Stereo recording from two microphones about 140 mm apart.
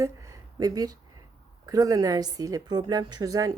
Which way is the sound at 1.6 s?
25° right (ahead or behind).